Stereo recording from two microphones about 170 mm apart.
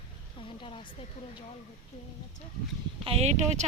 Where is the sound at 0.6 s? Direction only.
35° left (ahead or behind).